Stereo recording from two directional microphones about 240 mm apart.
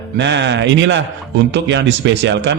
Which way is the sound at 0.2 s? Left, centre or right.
Right.